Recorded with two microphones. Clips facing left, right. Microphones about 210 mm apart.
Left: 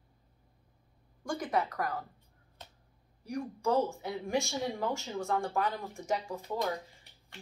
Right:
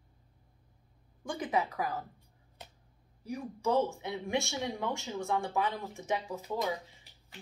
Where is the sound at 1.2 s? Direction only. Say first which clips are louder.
Even; 5° right (ahead or behind).